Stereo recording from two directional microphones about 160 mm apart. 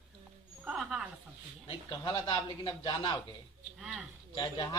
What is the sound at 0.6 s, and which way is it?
Speech, 5° right (ahead or behind).